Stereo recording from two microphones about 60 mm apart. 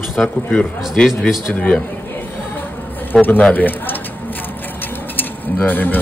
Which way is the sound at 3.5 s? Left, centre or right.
Left.